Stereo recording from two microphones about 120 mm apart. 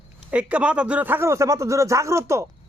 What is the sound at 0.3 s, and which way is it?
A man's voice, 10° right (ahead or behind).